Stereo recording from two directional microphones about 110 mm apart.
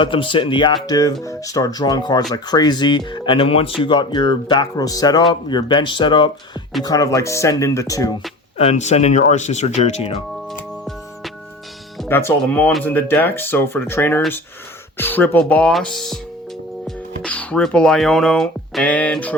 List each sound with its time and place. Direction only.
0.0 s speech: 50° left (ahead or behind)
0.9 s speech: 35° left (ahead or behind)
6.8 s speech: 30° left (ahead or behind)
8.5 s speech: 80° left
12.0 s speech: 20° left (ahead or behind)